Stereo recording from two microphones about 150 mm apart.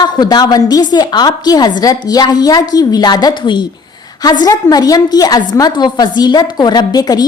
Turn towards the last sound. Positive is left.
turn(degrees=25)  # may be behind; listen again after turning